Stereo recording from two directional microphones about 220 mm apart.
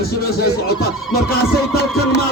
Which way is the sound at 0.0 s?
45° left (ahead or behind).